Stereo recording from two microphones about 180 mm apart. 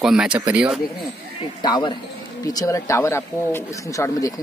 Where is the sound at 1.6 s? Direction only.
25° left (ahead or behind).